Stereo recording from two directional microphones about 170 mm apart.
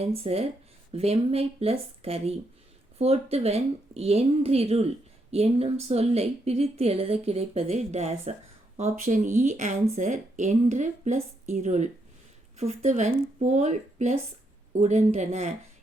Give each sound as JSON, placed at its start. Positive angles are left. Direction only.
{"t": 0.0, "sound": "speech", "side_deg": -35}